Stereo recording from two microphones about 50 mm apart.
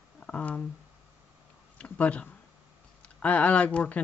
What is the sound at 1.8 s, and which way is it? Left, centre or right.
Speech, left.